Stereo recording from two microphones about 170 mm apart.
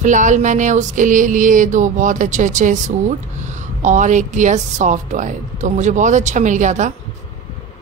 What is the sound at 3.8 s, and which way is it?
A woman's voice, 45° right (ahead or behind).